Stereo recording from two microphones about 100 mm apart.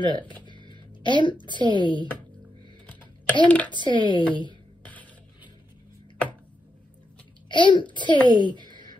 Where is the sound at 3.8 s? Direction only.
55° left (ahead or behind).